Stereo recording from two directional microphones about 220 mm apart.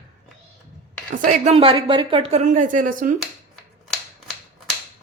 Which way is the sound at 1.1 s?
35° right (ahead or behind).